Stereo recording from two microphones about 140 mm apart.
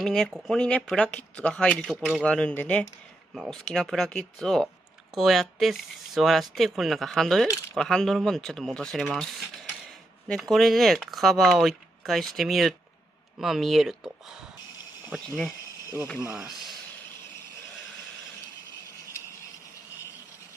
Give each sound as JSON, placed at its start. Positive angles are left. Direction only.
{"t": 0.0, "sound": "speech", "side_deg": 5}